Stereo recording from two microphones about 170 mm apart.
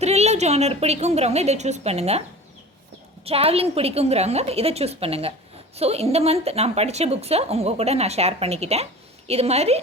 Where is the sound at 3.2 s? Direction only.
35° right (ahead or behind).